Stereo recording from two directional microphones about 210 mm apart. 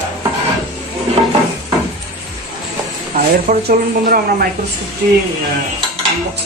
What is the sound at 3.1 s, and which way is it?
Speech, 45° right (ahead or behind).